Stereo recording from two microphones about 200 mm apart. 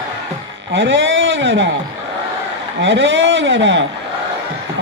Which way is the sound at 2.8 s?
65° right (ahead or behind).